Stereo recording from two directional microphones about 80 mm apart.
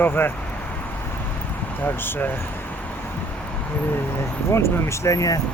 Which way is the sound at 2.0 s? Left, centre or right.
Left.